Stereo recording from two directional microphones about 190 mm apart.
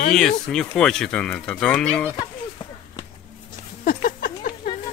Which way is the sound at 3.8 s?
45° left (ahead or behind).